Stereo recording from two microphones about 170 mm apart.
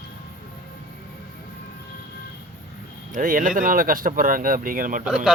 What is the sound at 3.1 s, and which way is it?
Speech, 55° right (ahead or behind).